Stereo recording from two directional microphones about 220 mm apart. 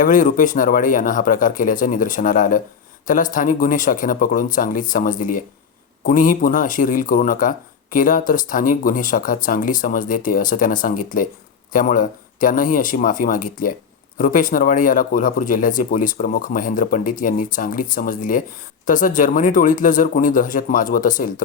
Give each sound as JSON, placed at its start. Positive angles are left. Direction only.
{"t": 0.0, "sound": "speech", "side_deg": 40}